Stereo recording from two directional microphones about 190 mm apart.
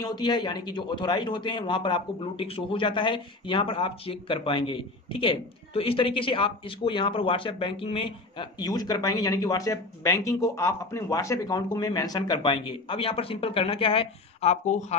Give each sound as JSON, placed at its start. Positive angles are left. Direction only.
{"t": 0.0, "sound": "speech", "side_deg": 20}